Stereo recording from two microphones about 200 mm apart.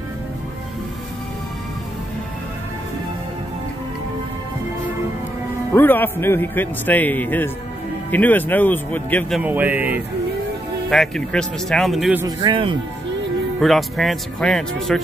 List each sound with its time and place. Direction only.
5.7 s a man's voice: 10° left (ahead or behind)
9.4 s speech: 10° right (ahead or behind)
10.9 s speech: centre (ahead or behind)
12.2 s speech: 20° right (ahead or behind)
13.6 s speech: centre (ahead or behind)